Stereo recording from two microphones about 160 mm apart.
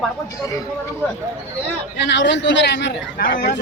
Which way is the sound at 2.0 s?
90° left.